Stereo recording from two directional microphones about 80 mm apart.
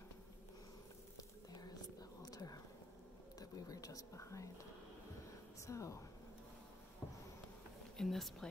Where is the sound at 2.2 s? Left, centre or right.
Left.